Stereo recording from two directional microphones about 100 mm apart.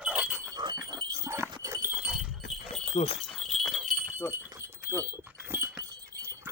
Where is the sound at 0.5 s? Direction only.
45° right (ahead or behind).